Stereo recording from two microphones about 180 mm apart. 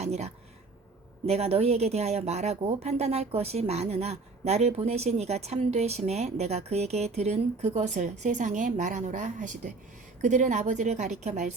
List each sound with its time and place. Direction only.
0.0 s speech: 35° right (ahead or behind)